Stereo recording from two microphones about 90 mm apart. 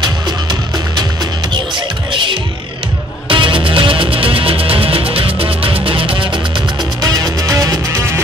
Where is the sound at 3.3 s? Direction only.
75° right (ahead or behind).